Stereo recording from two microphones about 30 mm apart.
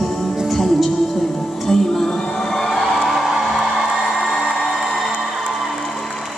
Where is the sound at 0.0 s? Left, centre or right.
Centre.